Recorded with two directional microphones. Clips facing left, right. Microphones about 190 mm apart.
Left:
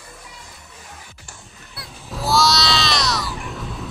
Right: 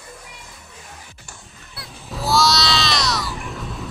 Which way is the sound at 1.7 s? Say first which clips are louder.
Even; centre (ahead or behind).